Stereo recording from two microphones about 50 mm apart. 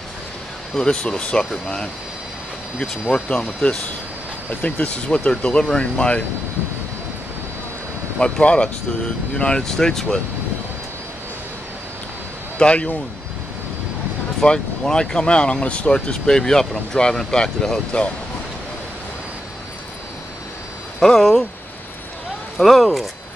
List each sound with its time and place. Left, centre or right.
0.7 s speech: centre
3.3 s speech: centre
8.2 s speech: left
12.5 s speech: left
14.4 s speech: centre
16.1 s speech: centre
21.0 s speech: centre
22.6 s speech: centre